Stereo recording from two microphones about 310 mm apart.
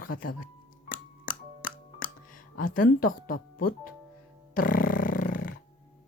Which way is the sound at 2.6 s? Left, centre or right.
Left.